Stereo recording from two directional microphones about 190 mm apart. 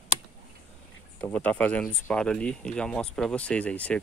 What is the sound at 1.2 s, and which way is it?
Speech, 5° left (ahead or behind).